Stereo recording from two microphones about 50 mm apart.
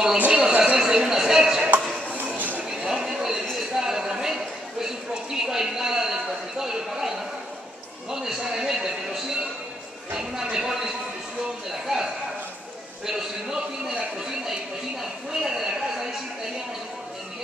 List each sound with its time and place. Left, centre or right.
0.3 s speech: centre
0.7 s speech: centre
2.1 s a sound: right
2.9 s a sound: centre
11.7 s speech: centre
15.0 s speech: centre